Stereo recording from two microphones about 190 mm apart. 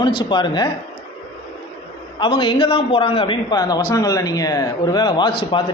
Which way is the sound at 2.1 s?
25° left (ahead or behind).